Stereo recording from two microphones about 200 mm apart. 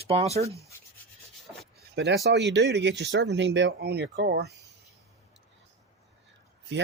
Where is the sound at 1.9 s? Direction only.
60° right (ahead or behind).